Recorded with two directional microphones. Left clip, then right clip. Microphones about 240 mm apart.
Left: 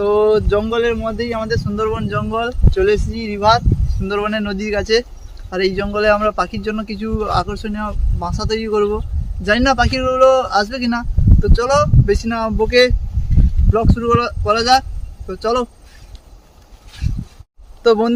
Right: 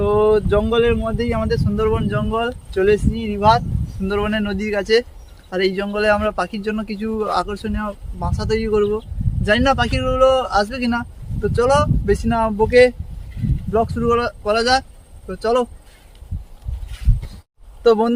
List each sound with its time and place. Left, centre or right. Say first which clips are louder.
0.0 s speech: left 2 dB; centre
17.8 s speech: left 1 dB; centre